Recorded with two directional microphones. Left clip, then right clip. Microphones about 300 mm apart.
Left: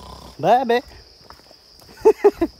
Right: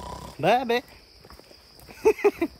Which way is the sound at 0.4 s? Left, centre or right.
Centre.